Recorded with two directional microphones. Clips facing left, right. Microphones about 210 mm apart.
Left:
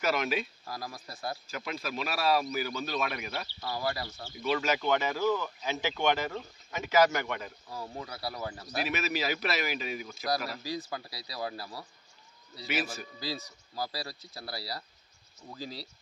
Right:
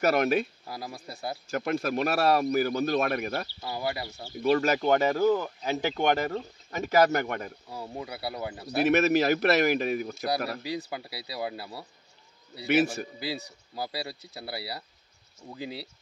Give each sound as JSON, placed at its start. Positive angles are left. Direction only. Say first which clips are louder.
{"t": 0.0, "sound": "speech", "louder": "right 6 dB", "side_deg": -55}
{"t": 0.9, "sound": "speech", "louder": "right 2 dB", "side_deg": -25}
{"t": 1.5, "sound": "a man's voice", "louder": "right 9 dB", "side_deg": -50}
{"t": 3.7, "sound": "speech", "louder": "right 2 dB", "side_deg": -20}
{"t": 4.4, "sound": "speech", "louder": "right 6 dB", "side_deg": -45}
{"t": 6.9, "sound": "speech", "louder": "right 3 dB", "side_deg": -55}
{"t": 7.7, "sound": "speech", "louder": "right 2 dB", "side_deg": -20}
{"t": 8.6, "sound": "speech", "louder": "right 12 dB", "side_deg": -60}
{"t": 11.2, "sound": "speech", "louder": "right 4 dB", "side_deg": -25}
{"t": 12.5, "sound": "speech", "louder": "right 10 dB", "side_deg": -55}
{"t": 13.7, "sound": "speech", "louder": "right 2 dB", "side_deg": -25}
{"t": 15.4, "sound": "speech", "louder": "right 3 dB", "side_deg": -10}